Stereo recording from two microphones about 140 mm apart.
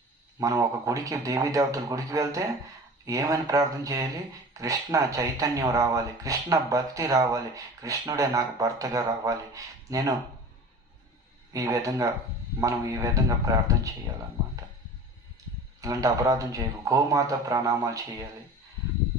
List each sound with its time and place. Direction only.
0.3 s speech: 25° right (ahead or behind)
11.5 s speech: 25° right (ahead or behind)
15.8 s speech: 25° right (ahead or behind)